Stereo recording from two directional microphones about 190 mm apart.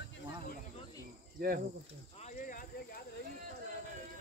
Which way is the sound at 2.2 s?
45° left (ahead or behind).